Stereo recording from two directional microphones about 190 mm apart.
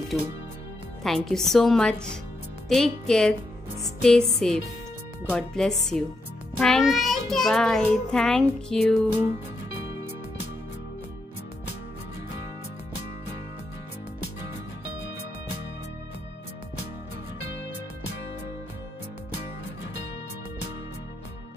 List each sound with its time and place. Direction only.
0.1 s a child's voice: centre (ahead or behind)